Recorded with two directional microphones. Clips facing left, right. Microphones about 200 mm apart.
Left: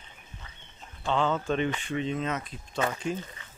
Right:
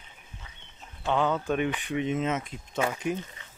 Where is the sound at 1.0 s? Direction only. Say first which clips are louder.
Right 1 dB; 10° right (ahead or behind).